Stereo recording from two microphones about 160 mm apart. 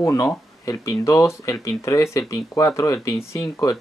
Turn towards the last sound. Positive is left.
turn(degrees=20)  # may be behind; listen again after turning